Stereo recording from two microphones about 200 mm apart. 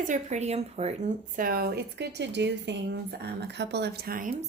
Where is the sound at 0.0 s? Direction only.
35° right (ahead or behind).